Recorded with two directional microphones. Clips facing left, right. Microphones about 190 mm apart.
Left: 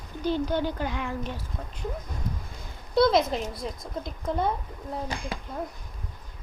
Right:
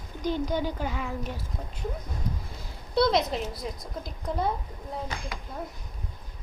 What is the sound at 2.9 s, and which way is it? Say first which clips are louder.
Speech: left 2 dB; centre (ahead or behind).